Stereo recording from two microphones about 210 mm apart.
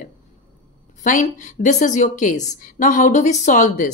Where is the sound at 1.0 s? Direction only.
35° left (ahead or behind).